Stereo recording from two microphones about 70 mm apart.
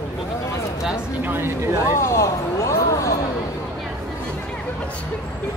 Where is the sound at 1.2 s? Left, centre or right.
Right.